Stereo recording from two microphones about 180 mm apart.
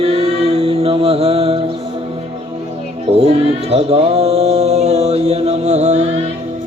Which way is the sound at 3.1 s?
35° right (ahead or behind).